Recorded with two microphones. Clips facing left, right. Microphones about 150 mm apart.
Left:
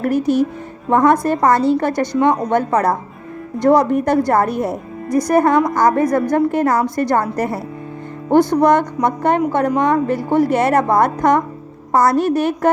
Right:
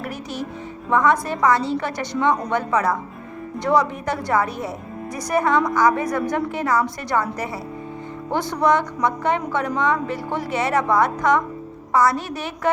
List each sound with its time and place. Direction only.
0.0 s a woman's voice: 50° left (ahead or behind)